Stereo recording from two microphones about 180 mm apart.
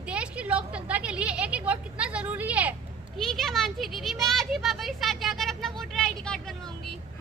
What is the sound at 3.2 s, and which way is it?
A child's voice, centre (ahead or behind).